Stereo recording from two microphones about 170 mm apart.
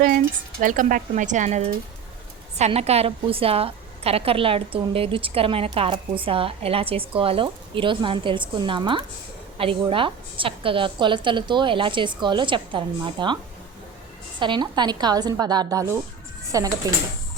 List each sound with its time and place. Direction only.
0.6 s a woman's voice: 50° right (ahead or behind); by 16.9 s 20° right (ahead or behind)